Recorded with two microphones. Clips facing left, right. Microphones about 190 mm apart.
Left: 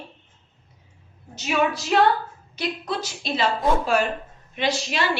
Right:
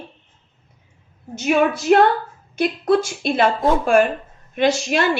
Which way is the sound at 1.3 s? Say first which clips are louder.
Right 6 dB; 55° right (ahead or behind).